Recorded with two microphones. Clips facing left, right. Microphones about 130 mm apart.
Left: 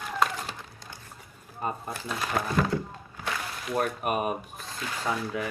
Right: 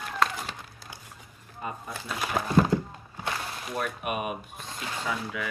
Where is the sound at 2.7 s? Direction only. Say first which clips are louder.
Right 3 dB; 15° right (ahead or behind).